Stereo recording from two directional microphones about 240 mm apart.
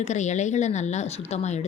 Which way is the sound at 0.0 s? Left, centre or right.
Left.